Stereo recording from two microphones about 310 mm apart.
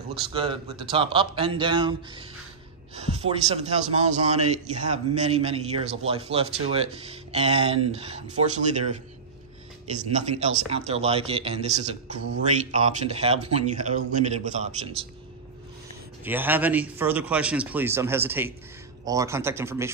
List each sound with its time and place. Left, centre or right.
0.3 s a man's voice: centre
10.1 s a man's voice: right
16.3 s a man's voice: centre